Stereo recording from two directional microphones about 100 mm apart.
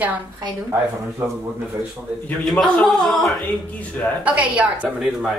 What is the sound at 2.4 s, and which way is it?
Speech, 5° left (ahead or behind).